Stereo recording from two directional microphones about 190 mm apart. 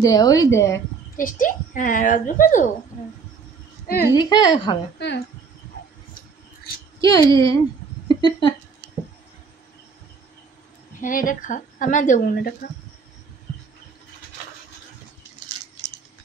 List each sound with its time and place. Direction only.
0.0 s a woman's voice: 20° left (ahead or behind)
1.1 s speech: 45° left (ahead or behind)
4.1 s a woman's voice: 20° left (ahead or behind)
4.9 s speech: 65° left (ahead or behind)
7.0 s a woman's voice: 20° left (ahead or behind)
11.0 s speech: 45° left (ahead or behind)